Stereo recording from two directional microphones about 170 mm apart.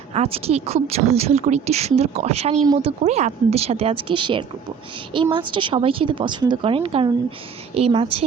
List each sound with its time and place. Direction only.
0.1 s a woman's voice: 35° right (ahead or behind)